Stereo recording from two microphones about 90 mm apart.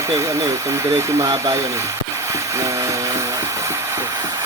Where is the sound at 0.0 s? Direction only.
35° right (ahead or behind).